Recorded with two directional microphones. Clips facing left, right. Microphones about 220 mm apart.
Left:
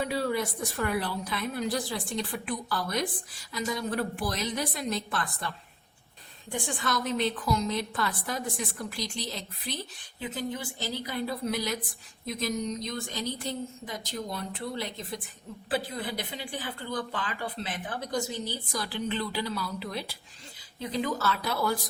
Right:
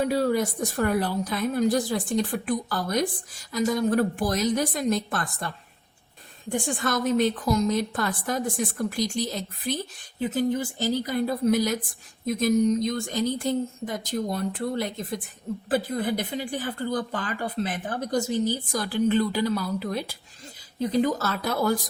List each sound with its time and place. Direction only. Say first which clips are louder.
0.0 s speech: right 6 dB; 40° right (ahead or behind)
6.5 s speech: right 5 dB; 45° right (ahead or behind)